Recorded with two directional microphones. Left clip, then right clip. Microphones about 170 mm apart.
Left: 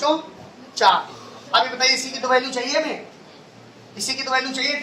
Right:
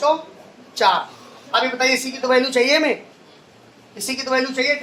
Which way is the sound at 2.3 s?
30° right (ahead or behind).